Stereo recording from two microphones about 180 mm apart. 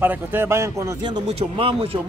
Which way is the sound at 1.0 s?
30° right (ahead or behind).